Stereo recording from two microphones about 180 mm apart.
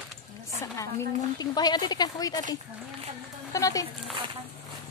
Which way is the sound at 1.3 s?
20° left (ahead or behind).